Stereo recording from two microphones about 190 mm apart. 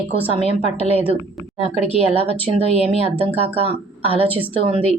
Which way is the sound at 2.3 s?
30° right (ahead or behind).